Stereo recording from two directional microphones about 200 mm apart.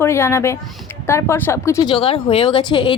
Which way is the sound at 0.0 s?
15° left (ahead or behind).